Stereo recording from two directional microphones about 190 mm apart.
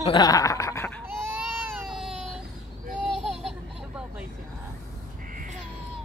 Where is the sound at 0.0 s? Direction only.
25° left (ahead or behind).